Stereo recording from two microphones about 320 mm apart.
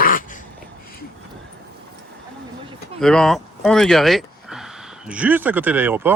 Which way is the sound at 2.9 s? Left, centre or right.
Centre.